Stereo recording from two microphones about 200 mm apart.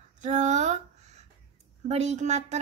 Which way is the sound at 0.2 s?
35° right (ahead or behind).